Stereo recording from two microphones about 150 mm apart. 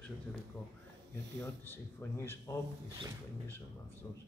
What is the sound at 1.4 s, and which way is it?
Speech, 15° left (ahead or behind).